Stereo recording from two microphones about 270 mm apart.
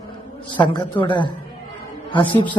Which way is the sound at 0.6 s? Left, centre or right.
Centre.